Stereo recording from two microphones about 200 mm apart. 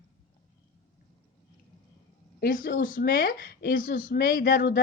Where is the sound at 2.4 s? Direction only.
45° left (ahead or behind).